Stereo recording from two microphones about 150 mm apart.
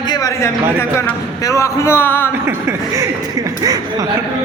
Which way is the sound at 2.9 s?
25° right (ahead or behind).